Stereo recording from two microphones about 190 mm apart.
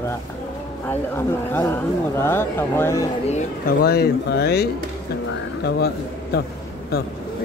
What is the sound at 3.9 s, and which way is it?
Speech, 60° left (ahead or behind).